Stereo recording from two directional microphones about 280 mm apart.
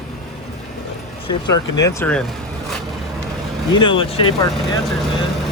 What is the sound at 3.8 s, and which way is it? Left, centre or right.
Speech, centre.